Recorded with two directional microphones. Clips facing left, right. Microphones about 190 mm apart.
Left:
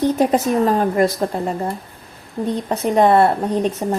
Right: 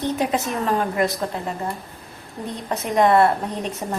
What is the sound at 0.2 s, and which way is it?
A woman's voice, 40° left (ahead or behind).